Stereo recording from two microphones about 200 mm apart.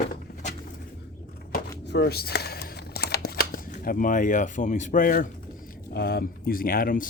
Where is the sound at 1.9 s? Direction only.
55° left (ahead or behind).